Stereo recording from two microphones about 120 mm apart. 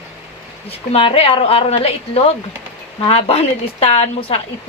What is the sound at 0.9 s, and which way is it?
Speech, 50° left (ahead or behind).